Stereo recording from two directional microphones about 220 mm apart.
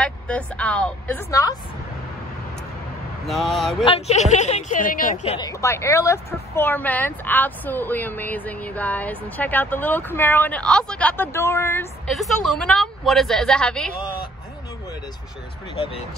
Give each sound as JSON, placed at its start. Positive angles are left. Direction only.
{"t": 0.0, "sound": "a woman's voice", "side_deg": 5}
{"t": 3.3, "sound": "a woman's voice", "side_deg": 0}
{"t": 3.8, "sound": "speech", "side_deg": 25}
{"t": 5.5, "sound": "speech", "side_deg": 15}
{"t": 12.1, "sound": "a woman's voice", "side_deg": 0}
{"t": 15.7, "sound": "speech", "side_deg": 25}